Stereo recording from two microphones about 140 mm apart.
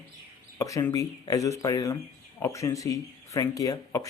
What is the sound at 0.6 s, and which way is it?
Speech, 25° left (ahead or behind).